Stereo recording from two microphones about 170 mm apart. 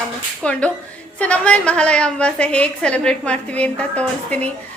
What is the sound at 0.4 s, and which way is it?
A woman's voice, 5° left (ahead or behind).